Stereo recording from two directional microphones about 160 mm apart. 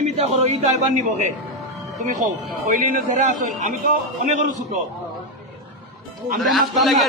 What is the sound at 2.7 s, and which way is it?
A man's voice, 55° right (ahead or behind).